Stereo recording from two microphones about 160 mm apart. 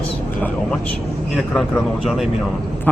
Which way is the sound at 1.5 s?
Centre (ahead or behind).